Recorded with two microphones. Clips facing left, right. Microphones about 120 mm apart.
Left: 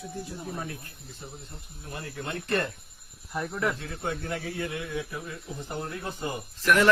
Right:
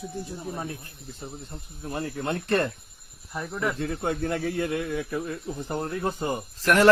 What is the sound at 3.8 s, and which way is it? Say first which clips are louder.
Speech: right 6 dB; 45° right (ahead or behind).